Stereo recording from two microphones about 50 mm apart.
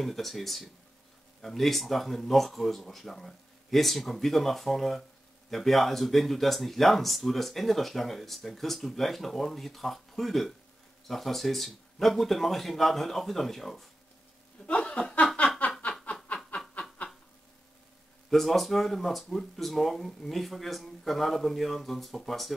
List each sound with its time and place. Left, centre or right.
0.0 s speech: centre
14.7 s chuckle: left
15.8 s snicker: left
18.3 s speech: centre